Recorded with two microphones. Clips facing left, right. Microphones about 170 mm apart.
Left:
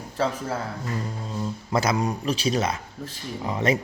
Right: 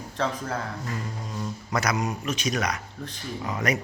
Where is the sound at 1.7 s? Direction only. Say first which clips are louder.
Left 3 dB; 25° left (ahead or behind).